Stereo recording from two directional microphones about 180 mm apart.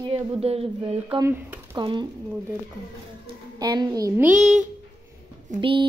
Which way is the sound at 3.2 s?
25° right (ahead or behind).